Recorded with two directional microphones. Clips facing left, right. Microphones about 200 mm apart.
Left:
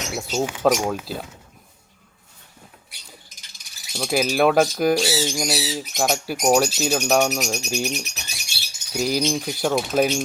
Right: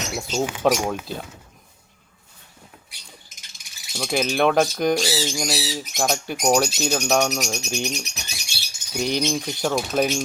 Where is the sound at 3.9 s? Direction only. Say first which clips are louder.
Left 1 dB; 5° left (ahead or behind).